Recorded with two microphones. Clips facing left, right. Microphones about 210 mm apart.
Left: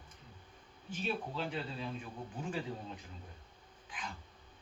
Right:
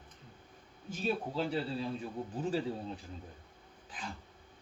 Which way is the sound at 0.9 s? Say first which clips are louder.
Right 4 dB; 40° right (ahead or behind).